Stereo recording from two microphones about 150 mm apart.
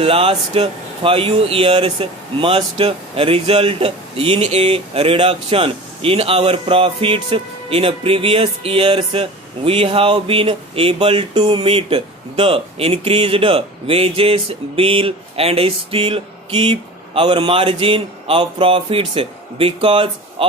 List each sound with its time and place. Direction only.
0.0 s speech: 40° right (ahead or behind)